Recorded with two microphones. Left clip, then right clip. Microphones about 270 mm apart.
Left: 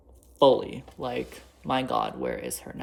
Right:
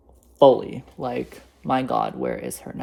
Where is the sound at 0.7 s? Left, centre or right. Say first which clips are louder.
Right 4 dB; right.